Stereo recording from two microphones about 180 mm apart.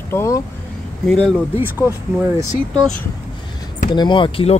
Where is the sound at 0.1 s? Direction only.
15° left (ahead or behind).